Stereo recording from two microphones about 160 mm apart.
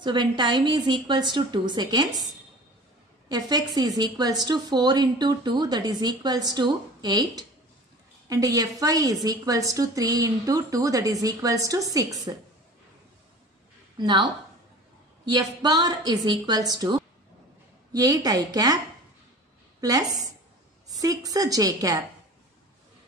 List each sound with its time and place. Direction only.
0.0 s a woman's voice: 30° right (ahead or behind)
3.3 s a woman's voice: 25° right (ahead or behind)
13.9 s a woman's voice: 25° right (ahead or behind)
19.8 s a woman's voice: 20° right (ahead or behind)